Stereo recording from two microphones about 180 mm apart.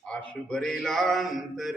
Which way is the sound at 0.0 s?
5° left (ahead or behind).